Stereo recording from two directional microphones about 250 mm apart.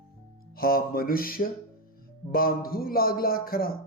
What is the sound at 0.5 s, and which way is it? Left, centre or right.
Speech, left.